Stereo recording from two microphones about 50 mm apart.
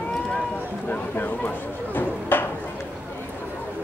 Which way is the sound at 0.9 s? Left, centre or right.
Left.